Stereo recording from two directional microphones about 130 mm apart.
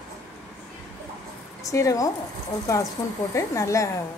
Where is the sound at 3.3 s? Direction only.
25° left (ahead or behind).